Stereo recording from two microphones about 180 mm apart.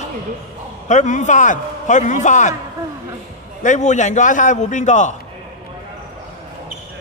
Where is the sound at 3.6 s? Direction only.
40° left (ahead or behind).